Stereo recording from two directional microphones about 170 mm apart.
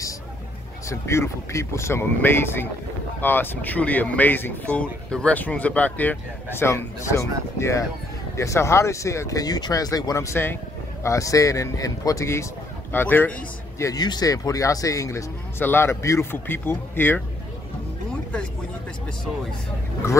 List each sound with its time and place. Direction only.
0.8 s speech: 15° left (ahead or behind)
20.0 s speech: 15° left (ahead or behind)